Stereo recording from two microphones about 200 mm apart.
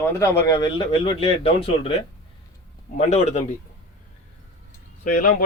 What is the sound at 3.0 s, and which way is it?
Speech, 30° left (ahead or behind).